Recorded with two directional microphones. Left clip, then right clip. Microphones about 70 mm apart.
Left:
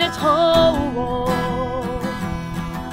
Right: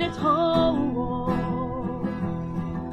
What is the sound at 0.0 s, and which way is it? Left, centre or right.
Music, left.